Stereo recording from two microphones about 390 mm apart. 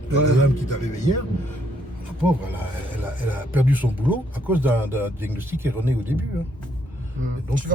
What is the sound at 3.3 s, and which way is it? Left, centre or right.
Speech, centre.